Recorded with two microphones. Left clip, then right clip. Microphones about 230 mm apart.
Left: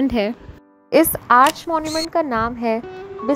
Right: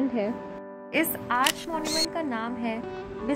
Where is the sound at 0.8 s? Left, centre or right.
Left.